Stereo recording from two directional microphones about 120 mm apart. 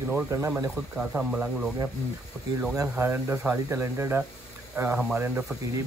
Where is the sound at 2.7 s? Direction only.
20° right (ahead or behind).